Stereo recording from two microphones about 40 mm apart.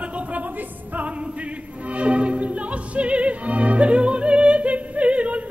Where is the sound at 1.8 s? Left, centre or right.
Right.